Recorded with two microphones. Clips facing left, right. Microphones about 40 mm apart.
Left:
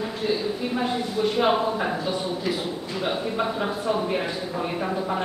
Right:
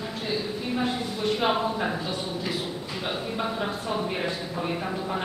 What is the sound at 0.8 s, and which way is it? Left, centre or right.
Speech, centre.